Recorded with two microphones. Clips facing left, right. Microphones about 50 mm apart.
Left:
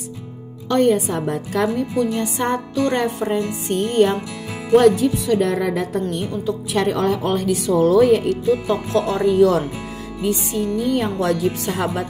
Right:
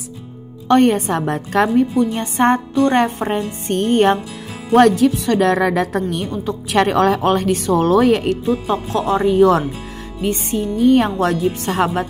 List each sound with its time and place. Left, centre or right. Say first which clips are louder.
0.7 s speech: right 3 dB; right
2.0 s speech: right 3 dB; right
4.7 s speech: right 2 dB; right
6.3 s speech: right 2 dB; right
6.8 s speech: right 6 dB; right
7.4 s speech: right 1 dB; right
8.5 s speech: even; right